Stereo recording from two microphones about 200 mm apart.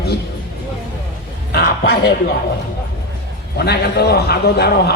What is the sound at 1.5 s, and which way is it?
Speech, 50° left (ahead or behind).